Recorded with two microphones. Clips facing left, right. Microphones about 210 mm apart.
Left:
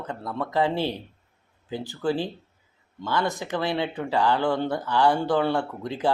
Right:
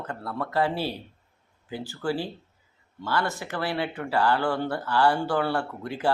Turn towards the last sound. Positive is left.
turn(degrees=20)  # may be behind; listen again after turning